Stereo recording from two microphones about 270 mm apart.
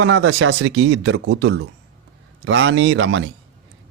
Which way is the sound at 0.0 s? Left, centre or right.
Right.